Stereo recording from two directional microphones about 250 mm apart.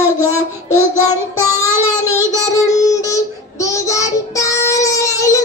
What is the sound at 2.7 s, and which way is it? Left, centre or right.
Child singing, centre.